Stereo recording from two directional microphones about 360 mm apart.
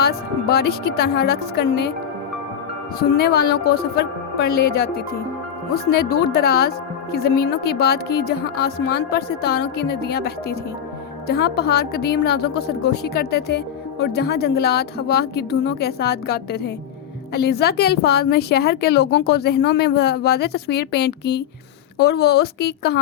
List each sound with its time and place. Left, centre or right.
0.0 s speech: left
3.2 s speech: left